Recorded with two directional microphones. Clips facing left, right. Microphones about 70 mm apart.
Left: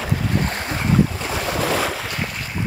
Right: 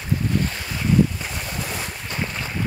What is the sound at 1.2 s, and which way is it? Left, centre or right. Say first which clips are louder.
Boat: left 8 dB; left.